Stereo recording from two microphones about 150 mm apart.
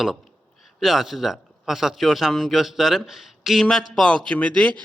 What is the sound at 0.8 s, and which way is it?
A man's voice, centre (ahead or behind).